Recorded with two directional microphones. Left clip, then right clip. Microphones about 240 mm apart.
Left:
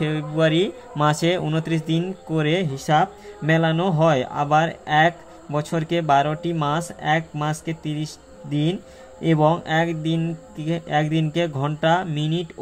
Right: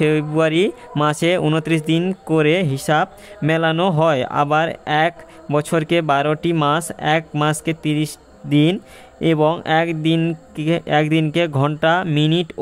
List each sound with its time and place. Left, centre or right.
0.0 s speech: right